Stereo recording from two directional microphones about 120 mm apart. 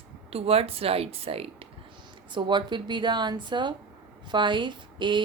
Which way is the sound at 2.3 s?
40° right (ahead or behind).